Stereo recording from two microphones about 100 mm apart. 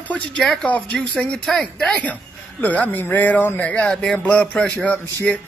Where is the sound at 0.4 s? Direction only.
5° left (ahead or behind).